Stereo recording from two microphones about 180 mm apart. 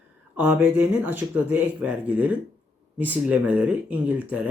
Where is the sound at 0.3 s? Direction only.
10° right (ahead or behind).